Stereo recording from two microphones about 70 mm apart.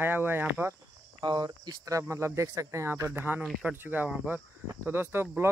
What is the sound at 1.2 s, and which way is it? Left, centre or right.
Speech, right.